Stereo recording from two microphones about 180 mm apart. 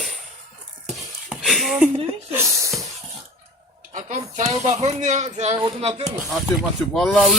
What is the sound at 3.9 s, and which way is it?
Speech, 45° right (ahead or behind).